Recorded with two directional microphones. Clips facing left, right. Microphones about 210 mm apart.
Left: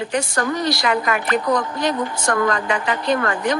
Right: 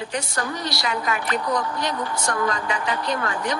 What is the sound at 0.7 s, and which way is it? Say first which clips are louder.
Speech: left 6 dB; 55° left (ahead or behind).